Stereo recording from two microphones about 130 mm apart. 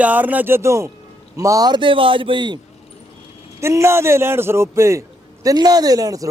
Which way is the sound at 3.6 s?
20° right (ahead or behind).